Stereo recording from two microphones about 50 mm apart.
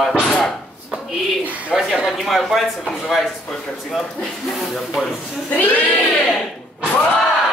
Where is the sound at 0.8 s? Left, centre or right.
Centre.